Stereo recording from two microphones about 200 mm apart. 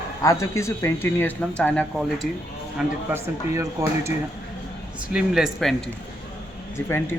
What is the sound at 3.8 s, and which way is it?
Speech, 15° right (ahead or behind).